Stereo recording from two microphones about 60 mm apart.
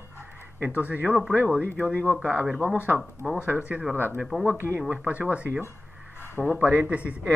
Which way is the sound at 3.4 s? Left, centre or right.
Right.